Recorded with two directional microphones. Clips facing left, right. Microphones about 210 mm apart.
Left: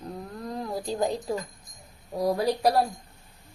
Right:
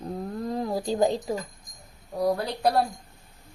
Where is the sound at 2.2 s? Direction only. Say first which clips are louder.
Left 1 dB; 10° left (ahead or behind).